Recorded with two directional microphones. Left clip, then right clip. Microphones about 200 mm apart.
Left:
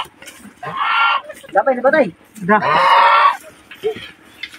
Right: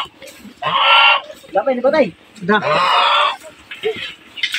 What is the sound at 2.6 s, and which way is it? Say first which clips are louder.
Speech: left 4 dB; 25° right (ahead or behind).